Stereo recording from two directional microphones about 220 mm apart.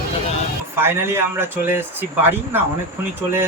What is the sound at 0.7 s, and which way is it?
Speech, 10° right (ahead or behind).